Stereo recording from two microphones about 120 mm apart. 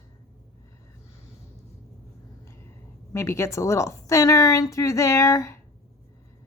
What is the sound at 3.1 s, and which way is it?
Speech, 25° left (ahead or behind).